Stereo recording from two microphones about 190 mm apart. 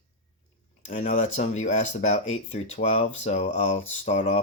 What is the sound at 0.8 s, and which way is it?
Speech, 40° left (ahead or behind).